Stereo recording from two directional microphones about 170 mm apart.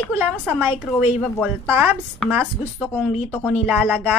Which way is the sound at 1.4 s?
10° right (ahead or behind).